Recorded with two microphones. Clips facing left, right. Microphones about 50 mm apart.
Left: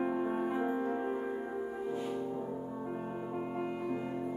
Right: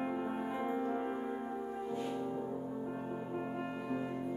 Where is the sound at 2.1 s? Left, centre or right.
Centre.